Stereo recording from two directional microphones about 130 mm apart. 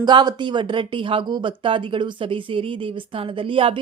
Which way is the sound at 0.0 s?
35° right (ahead or behind).